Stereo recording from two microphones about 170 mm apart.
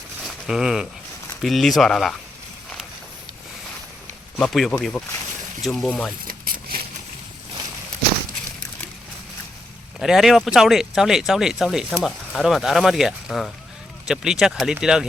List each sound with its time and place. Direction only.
0.4 s speech: centre (ahead or behind)
4.4 s speech: centre (ahead or behind)
6.2 s a sound: 60° right (ahead or behind)
10.0 s speech: centre (ahead or behind)